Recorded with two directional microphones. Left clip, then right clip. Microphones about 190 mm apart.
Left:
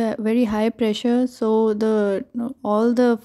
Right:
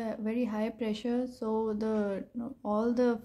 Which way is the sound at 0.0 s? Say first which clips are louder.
Left 13 dB; 45° left (ahead or behind).